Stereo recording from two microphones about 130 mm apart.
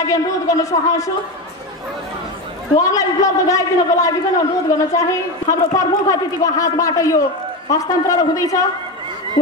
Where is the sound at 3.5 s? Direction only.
25° left (ahead or behind).